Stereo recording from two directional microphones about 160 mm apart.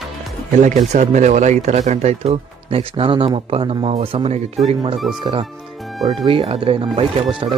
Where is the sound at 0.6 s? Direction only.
50° right (ahead or behind).